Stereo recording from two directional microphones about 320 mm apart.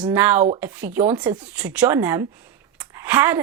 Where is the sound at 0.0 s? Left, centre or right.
Centre.